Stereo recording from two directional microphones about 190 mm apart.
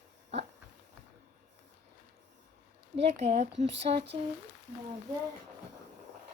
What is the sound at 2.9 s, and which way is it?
Speech, 35° right (ahead or behind).